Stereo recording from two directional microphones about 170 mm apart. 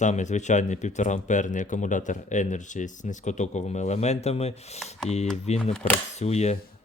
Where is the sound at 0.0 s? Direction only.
45° left (ahead or behind).